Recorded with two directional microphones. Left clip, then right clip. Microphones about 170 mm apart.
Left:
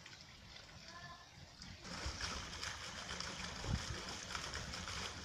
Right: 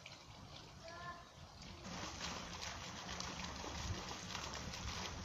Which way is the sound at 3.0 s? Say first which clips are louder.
Even; 50° right (ahead or behind).